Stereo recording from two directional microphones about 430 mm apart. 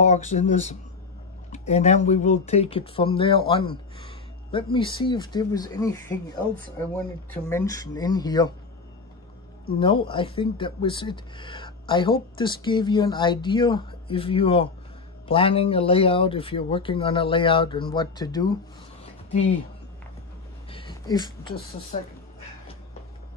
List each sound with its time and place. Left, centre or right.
0.0 s speech: centre
7.4 s speech: centre
9.7 s speech: centre
20.7 s speech: centre